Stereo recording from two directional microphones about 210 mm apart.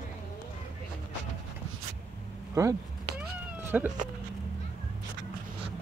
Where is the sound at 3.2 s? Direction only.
10° right (ahead or behind).